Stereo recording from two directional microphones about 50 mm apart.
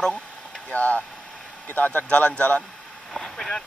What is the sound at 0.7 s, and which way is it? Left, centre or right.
Speech, left.